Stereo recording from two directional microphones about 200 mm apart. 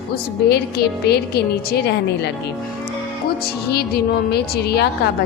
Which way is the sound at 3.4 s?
55° left (ahead or behind).